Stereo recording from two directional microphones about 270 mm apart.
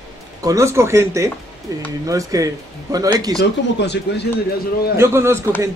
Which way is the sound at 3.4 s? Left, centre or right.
Left.